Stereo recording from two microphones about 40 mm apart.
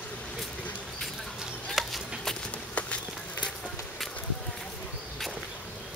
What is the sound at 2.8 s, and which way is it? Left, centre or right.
Run, left.